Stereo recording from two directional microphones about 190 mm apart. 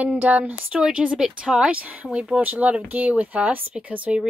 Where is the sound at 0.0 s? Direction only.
5° right (ahead or behind).